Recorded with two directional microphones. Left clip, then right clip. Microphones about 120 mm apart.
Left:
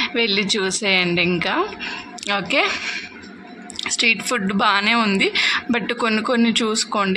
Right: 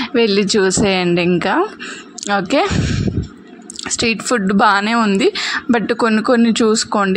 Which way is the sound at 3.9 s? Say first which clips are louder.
Right 2 dB; 60° right (ahead or behind).